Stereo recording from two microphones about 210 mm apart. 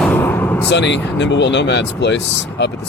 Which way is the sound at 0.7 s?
55° left (ahead or behind).